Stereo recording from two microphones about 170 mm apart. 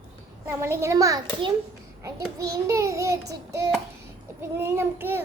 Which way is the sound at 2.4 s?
20° right (ahead or behind).